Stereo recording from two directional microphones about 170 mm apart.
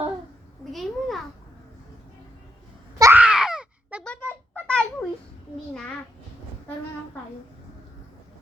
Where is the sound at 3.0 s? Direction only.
10° right (ahead or behind).